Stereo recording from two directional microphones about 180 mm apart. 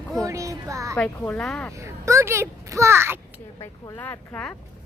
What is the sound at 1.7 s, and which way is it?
A child's voice, 15° right (ahead or behind).